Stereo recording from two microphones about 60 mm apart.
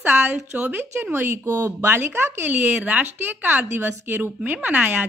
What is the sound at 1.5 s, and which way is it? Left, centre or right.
Speech, right.